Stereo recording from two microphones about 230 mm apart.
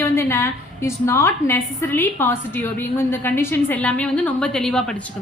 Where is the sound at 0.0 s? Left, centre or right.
Centre.